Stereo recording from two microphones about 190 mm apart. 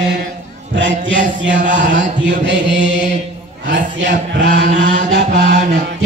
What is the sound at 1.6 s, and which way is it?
Speech, 40° right (ahead or behind).